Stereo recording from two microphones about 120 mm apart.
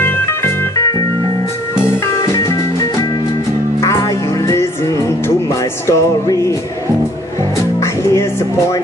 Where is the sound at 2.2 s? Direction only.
25° left (ahead or behind).